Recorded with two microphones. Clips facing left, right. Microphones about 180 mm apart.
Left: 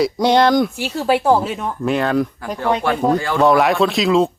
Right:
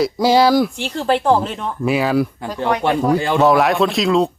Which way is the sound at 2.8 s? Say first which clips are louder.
Right 3 dB; 25° right (ahead or behind).